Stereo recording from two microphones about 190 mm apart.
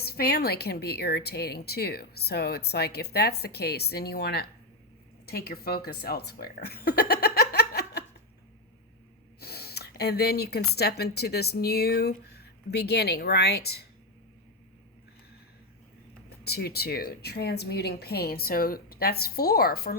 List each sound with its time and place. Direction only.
0.0 s a woman's voice: 55° left (ahead or behind)
9.4 s speech: 55° left (ahead or behind)
16.4 s speech: 55° left (ahead or behind)